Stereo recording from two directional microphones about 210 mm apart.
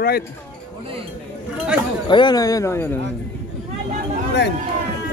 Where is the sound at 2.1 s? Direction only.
20° left (ahead or behind).